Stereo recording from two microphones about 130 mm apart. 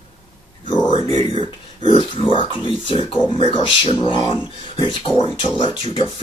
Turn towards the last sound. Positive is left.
turn(degrees=45)  # may be behind; listen again after turning